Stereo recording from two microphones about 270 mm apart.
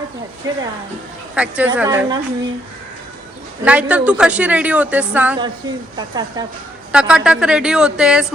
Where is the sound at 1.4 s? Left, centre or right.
Centre.